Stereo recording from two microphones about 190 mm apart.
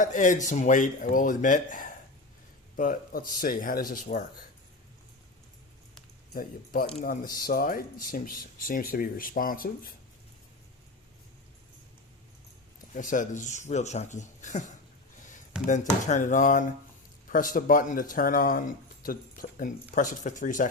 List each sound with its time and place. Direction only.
0.0 s speech: 40° left (ahead or behind)
6.3 s speech: 50° left (ahead or behind)
12.9 s speech: 45° left (ahead or behind)